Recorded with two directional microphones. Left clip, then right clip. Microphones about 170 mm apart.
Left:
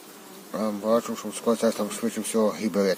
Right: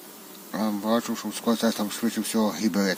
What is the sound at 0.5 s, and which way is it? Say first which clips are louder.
Speech: left 2 dB; centre (ahead or behind).